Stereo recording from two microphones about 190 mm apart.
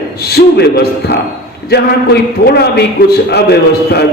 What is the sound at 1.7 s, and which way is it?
Speech, 60° left (ahead or behind).